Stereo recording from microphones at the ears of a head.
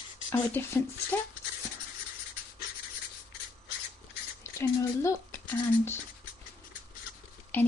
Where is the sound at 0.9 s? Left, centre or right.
Left.